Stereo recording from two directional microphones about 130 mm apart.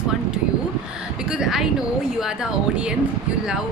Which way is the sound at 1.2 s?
5° right (ahead or behind).